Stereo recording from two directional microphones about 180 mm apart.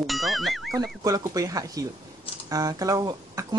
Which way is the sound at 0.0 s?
Centre (ahead or behind).